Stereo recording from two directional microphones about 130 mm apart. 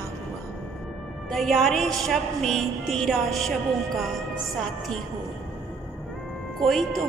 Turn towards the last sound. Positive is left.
turn(degrees=0)  # may be behind; listen again after turning